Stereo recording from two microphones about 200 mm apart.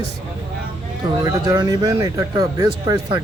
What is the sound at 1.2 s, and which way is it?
Speech, 15° right (ahead or behind).